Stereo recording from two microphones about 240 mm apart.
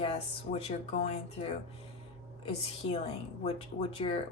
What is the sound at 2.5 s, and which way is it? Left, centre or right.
Speech, left.